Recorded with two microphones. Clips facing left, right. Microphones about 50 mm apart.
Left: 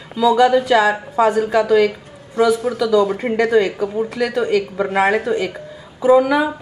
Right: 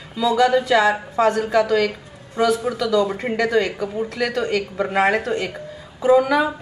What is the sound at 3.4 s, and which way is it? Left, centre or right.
A woman's voice, centre.